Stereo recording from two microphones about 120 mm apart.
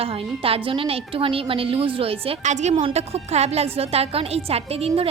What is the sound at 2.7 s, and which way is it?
A woman's voice, 55° right (ahead or behind).